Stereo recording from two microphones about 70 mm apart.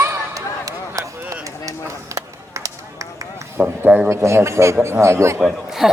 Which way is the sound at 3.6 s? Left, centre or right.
Right.